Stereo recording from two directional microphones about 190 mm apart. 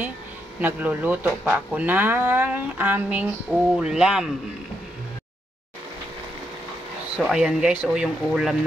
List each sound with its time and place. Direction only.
0.6 s speech: 10° right (ahead or behind)
7.2 s speech: centre (ahead or behind)